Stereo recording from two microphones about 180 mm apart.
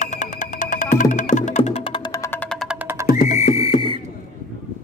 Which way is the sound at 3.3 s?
35° left (ahead or behind).